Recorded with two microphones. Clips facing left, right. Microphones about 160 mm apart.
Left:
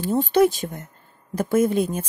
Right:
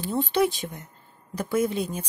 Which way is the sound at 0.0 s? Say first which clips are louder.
Left 6 dB; 45° left (ahead or behind).